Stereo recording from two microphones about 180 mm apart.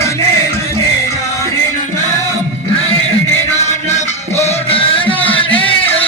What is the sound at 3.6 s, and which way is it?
Music, 35° left (ahead or behind).